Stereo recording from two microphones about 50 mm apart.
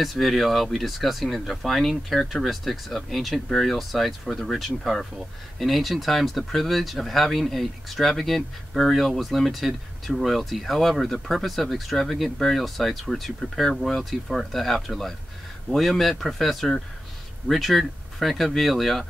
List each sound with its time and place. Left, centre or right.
0.0 s speech: centre